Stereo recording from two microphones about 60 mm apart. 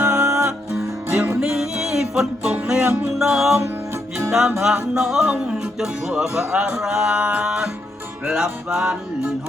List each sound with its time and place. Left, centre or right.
0.0 s music: right
0.7 s music: right
1.5 s music: centre
3.2 s speech: centre
4.3 s music: centre
4.6 s speech: centre